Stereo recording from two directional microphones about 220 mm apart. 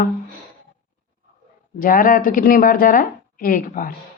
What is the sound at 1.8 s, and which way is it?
Speech, 40° left (ahead or behind).